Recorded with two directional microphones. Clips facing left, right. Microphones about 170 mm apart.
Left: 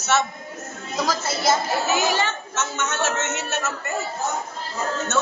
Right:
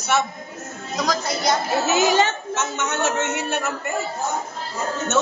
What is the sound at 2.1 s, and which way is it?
A woman's voice, 15° right (ahead or behind).